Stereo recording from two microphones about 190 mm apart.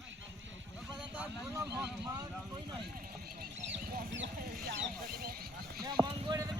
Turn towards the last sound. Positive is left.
turn(degrees=-20)  # may be behind; listen again after turning